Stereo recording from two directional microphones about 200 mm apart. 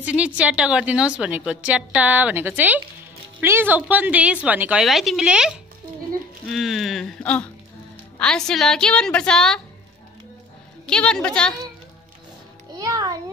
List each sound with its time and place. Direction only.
0.0 s a woman's voice: 5° right (ahead or behind)
6.5 s a woman's voice: centre (ahead or behind)
10.9 s a woman's voice: 5° left (ahead or behind)
12.7 s music: 20° right (ahead or behind)